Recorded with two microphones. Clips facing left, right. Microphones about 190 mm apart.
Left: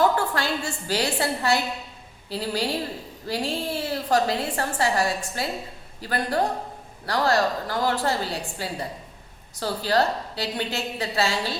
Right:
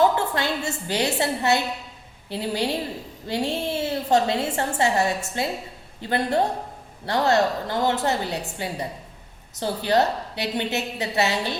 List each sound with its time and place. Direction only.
0.0 s a woman's voice: 20° right (ahead or behind)